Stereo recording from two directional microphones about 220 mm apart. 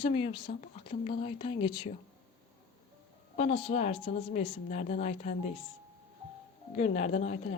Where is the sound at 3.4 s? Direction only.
25° left (ahead or behind).